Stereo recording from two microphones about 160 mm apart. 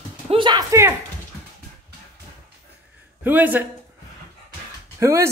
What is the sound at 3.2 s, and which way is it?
Speech, 10° right (ahead or behind).